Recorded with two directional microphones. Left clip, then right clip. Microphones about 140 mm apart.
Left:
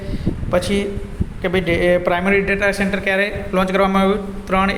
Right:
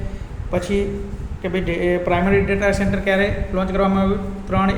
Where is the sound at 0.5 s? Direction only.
15° left (ahead or behind).